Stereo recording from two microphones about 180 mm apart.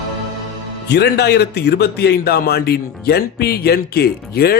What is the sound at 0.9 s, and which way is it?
A man's voice, 65° left (ahead or behind).